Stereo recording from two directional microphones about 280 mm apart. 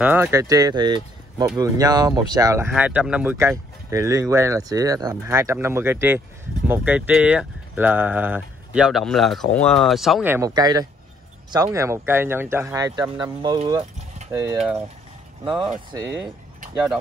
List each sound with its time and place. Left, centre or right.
0.0 s speech: centre